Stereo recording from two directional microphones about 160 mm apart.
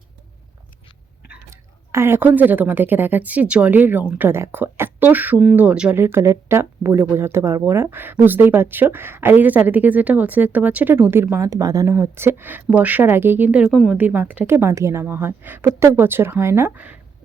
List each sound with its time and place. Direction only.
1.5 s speech: 15° right (ahead or behind)